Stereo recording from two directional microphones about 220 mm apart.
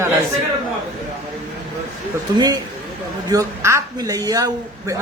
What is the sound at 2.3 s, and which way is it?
A man's voice, 20° right (ahead or behind).